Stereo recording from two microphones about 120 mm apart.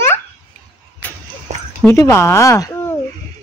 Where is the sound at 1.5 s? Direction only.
90° right.